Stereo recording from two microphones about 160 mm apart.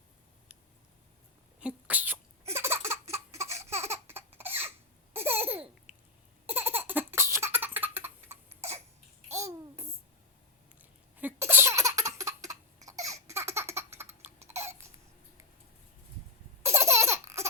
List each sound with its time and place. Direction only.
1.5 s laughter: 10° right (ahead or behind)
3.8 s a sound: 15° right (ahead or behind)
5.1 s laughter: 15° right (ahead or behind)
11.2 s laughter: 15° right (ahead or behind)
12.2 s baby laughter: 20° right (ahead or behind)
14.4 s hiccup: 15° right (ahead or behind)
16.6 s laughter: 15° right (ahead or behind)